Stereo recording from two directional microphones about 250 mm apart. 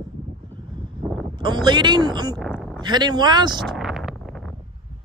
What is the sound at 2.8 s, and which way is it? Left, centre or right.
Speech, centre.